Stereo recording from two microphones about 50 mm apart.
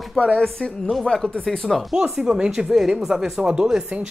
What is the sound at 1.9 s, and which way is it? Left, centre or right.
Speech, centre.